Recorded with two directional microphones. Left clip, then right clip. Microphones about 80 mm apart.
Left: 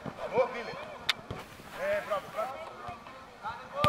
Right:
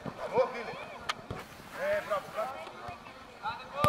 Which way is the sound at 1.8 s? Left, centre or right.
Centre.